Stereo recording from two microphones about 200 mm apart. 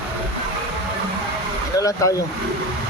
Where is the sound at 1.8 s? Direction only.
15° left (ahead or behind).